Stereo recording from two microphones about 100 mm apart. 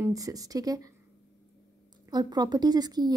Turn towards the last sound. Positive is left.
turn(degrees=-40)  # may be behind; listen again after turning